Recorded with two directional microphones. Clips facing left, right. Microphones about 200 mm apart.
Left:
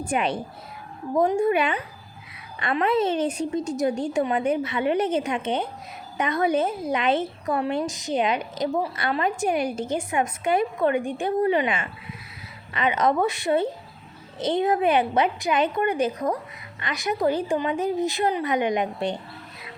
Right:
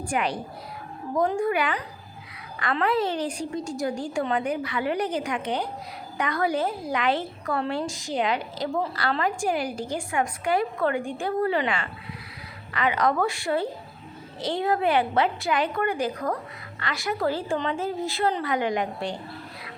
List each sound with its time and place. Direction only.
0.0 s speech: 25° left (ahead or behind)